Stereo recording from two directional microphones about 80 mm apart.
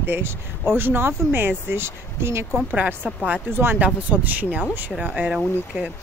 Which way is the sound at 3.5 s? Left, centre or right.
Right.